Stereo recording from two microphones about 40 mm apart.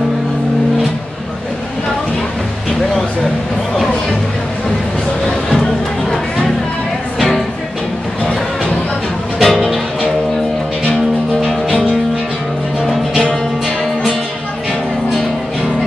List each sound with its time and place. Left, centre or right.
5.5 s music: centre
7.2 s music: centre
9.4 s music: centre